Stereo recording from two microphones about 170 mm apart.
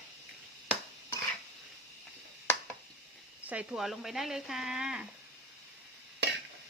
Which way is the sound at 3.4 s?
10° right (ahead or behind).